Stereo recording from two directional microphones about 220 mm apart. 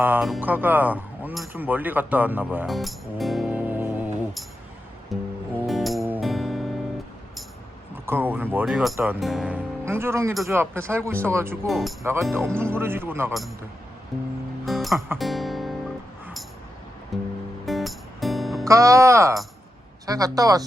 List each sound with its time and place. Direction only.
0.0 s speech: 5° right (ahead or behind)
5.1 s music: centre (ahead or behind)
8.0 s speech: 10° right (ahead or behind)
11.7 s speech: centre (ahead or behind)
12.3 s speech: 10° right (ahead or behind)
14.6 s music: centre (ahead or behind)
17.1 s speech: centre (ahead or behind)
17.7 s music: centre (ahead or behind)
18.6 s speech: 15° right (ahead or behind)